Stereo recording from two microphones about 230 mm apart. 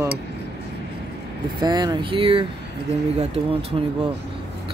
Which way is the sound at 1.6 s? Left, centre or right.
Centre.